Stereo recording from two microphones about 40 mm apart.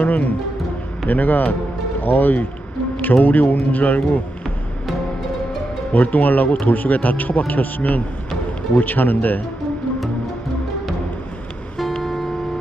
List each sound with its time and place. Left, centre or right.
0.0 s speech: left
5.9 s speech: left
12.0 s music: centre